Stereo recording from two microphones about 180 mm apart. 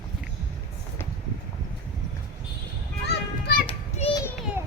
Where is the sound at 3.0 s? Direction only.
60° left (ahead or behind).